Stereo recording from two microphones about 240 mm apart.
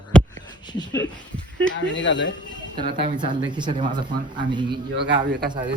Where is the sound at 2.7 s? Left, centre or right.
Centre.